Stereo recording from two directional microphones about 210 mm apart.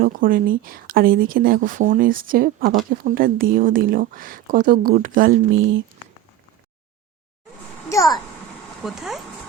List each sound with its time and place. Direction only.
0.0 s a woman's voice: 40° right (ahead or behind)
7.9 s a child's voice: 15° left (ahead or behind)
8.8 s speech: centre (ahead or behind)